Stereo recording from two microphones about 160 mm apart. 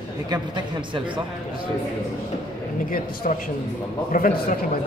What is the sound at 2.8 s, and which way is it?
A man's voice, 60° left (ahead or behind).